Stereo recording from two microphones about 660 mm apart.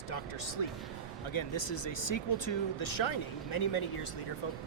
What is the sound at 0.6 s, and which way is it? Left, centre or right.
Speech, left.